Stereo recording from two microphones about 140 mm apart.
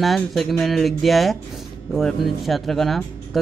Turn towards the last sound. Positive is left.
turn(degrees=0)  # may be behind; listen again after turning